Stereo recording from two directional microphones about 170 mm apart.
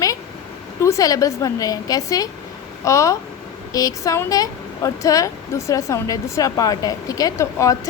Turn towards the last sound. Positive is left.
turn(degrees=20)  # may be behind; listen again after turning